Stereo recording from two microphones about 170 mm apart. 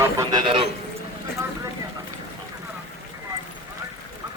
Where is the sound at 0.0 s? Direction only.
20° right (ahead or behind).